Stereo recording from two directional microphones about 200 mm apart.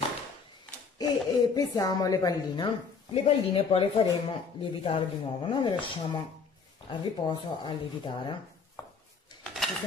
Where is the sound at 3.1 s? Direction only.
30° left (ahead or behind).